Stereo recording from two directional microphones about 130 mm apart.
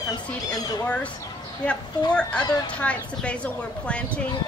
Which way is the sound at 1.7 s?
10° left (ahead or behind).